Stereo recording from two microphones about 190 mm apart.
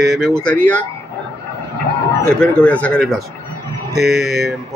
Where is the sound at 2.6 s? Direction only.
5° left (ahead or behind).